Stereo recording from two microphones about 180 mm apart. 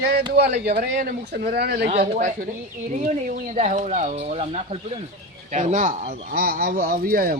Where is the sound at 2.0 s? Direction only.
50° right (ahead or behind).